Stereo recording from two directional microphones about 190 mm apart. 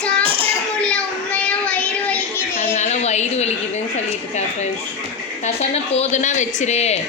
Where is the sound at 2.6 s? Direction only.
35° left (ahead or behind).